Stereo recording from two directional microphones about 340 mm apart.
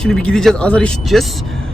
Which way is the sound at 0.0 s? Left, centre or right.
Centre.